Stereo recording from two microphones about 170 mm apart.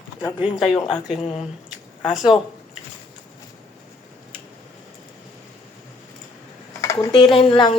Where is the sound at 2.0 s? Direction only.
Centre (ahead or behind).